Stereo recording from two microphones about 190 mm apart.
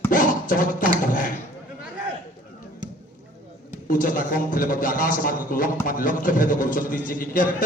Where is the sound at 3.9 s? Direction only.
50° left (ahead or behind).